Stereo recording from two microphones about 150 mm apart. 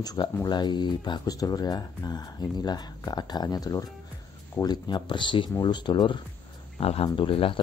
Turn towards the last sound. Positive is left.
turn(degrees=35)  # may be behind; listen again after turning